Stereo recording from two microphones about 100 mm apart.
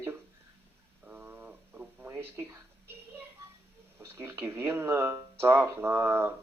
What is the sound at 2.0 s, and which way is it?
Speech, 25° right (ahead or behind).